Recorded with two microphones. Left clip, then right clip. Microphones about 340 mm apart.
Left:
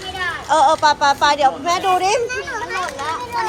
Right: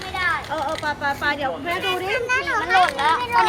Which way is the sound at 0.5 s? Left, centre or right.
Centre.